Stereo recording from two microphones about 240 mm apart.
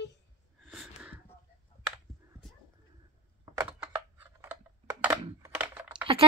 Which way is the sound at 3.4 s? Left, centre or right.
Centre.